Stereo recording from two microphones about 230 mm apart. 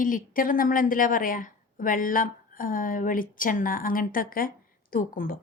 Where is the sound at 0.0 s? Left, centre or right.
Left.